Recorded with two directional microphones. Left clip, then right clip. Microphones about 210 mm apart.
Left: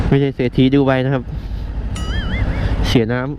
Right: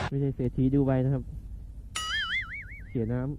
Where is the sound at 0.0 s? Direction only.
10° left (ahead or behind).